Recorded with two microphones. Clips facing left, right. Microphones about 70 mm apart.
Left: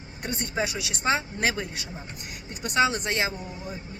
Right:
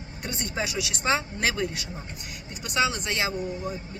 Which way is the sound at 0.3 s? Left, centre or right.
Left.